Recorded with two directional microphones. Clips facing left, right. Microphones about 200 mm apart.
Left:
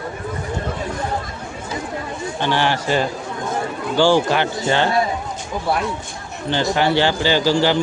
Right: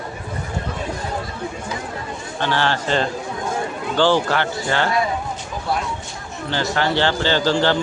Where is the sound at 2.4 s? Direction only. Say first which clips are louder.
Left 1 dB; 15° left (ahead or behind).